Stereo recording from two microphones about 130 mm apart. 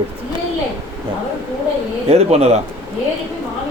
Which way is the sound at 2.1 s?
55° right (ahead or behind).